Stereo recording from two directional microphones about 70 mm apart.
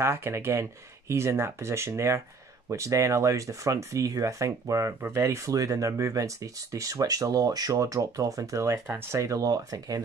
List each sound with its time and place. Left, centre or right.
0.0 s speech: right
5.0 s speech: right
5.5 s speech: right